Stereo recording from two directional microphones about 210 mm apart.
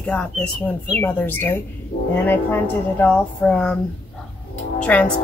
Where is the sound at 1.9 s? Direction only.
45° left (ahead or behind).